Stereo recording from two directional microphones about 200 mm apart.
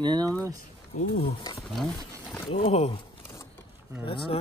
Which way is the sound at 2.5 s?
30° left (ahead or behind).